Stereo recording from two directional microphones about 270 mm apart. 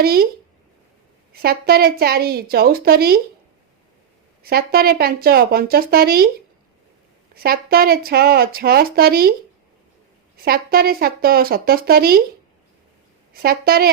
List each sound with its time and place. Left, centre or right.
0.0 s speech: right
1.4 s speech: right
4.4 s speech: right
7.3 s speech: right
10.4 s speech: right
13.3 s speech: right